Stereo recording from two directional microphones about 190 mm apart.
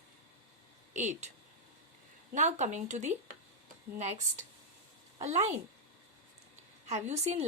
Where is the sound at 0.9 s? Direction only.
40° right (ahead or behind).